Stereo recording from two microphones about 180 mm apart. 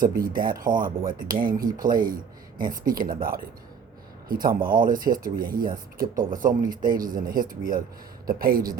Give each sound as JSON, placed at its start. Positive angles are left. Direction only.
{"t": 0.0, "sound": "speech", "side_deg": -50}